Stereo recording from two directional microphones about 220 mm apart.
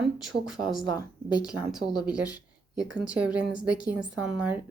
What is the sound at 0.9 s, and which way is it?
Speech, 20° left (ahead or behind).